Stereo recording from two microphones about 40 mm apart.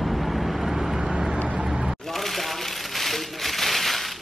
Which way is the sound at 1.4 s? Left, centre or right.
Right.